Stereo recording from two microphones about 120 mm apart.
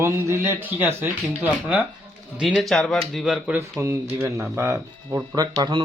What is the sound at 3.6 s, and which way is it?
Speech, 25° right (ahead or behind).